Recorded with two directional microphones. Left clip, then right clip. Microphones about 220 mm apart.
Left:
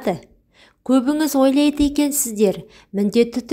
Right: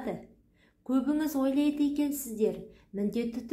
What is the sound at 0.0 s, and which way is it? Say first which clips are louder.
A woman's voice: left 14 dB; 40° left (ahead or behind).